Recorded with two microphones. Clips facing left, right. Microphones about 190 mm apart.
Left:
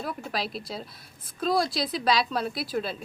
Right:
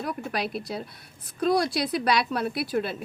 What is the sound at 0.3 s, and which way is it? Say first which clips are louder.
A woman's voice: right 3 dB; 55° right (ahead or behind).